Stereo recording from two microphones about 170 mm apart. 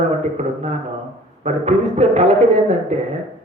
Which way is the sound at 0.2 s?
40° right (ahead or behind).